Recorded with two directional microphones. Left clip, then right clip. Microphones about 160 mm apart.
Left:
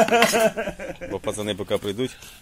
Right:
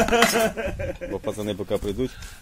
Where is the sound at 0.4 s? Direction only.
50° left (ahead or behind).